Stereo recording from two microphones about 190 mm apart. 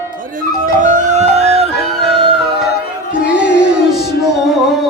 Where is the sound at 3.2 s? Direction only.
60° left (ahead or behind).